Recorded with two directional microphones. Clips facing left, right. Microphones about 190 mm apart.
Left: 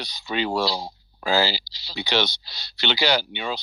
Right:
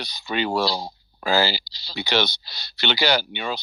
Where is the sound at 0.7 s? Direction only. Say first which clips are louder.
Right 1 dB; 5° left (ahead or behind).